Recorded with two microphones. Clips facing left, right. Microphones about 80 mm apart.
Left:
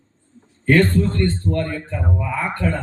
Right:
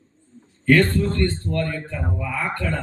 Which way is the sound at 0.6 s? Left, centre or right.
Left.